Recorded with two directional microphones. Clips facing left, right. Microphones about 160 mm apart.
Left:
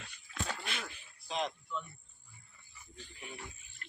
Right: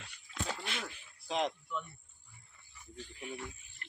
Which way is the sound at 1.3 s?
65° right (ahead or behind).